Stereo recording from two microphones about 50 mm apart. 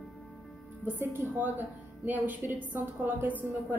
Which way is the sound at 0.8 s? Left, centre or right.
Right.